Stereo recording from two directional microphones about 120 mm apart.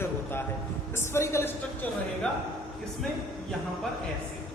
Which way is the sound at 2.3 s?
5° left (ahead or behind).